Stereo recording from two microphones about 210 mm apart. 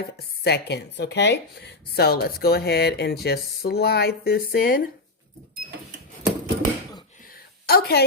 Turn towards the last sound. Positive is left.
turn(degrees=45)  # may be behind; listen again after turning